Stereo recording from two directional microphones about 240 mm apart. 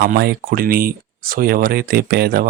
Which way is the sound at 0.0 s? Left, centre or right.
Right.